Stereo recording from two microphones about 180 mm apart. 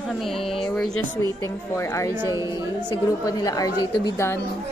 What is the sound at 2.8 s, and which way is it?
A woman's voice, 20° left (ahead or behind).